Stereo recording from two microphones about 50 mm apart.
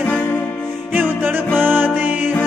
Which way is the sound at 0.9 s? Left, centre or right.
Right.